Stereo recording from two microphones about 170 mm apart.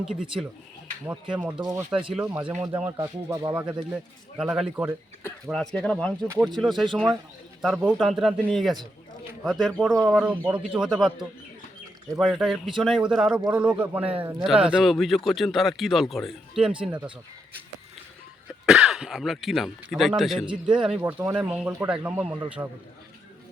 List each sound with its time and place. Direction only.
0.0 s a man's voice: 5° right (ahead or behind)
3.0 s speech: 20° right (ahead or behind)
3.5 s a man's voice: 10° right (ahead or behind)
18.6 s a man's voice: 5° right (ahead or behind)